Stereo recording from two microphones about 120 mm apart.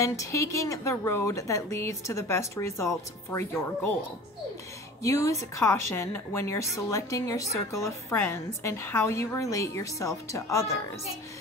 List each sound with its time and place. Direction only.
0.0 s a woman's voice: 25° left (ahead or behind)
5.0 s a woman's voice: 25° left (ahead or behind)